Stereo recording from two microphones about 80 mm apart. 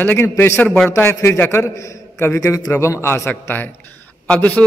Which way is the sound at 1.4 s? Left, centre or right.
Left.